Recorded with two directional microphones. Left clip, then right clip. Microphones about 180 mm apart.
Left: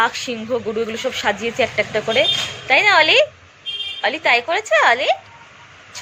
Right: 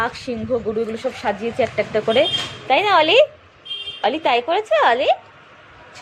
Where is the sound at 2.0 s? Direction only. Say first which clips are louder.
Even; 30° right (ahead or behind).